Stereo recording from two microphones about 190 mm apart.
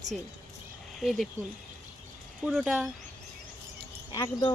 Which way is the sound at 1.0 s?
Centre (ahead or behind).